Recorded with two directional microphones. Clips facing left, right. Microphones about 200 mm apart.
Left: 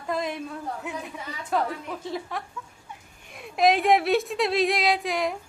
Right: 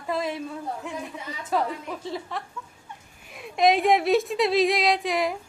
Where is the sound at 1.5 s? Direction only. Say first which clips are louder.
Even; centre (ahead or behind).